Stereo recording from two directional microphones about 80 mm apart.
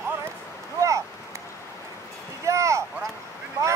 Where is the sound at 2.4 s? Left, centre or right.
Right.